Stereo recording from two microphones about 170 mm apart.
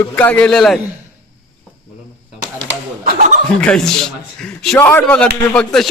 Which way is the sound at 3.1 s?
55° right (ahead or behind).